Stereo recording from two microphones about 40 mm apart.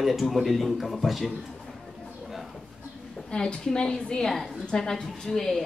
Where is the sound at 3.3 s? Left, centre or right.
Centre.